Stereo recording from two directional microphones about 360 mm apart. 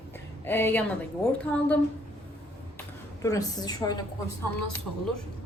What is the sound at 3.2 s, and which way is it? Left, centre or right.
Speech, centre.